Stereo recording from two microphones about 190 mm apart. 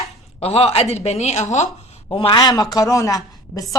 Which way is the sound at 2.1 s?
25° left (ahead or behind).